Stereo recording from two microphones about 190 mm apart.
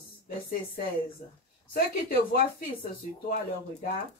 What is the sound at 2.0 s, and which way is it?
Speech, 55° left (ahead or behind).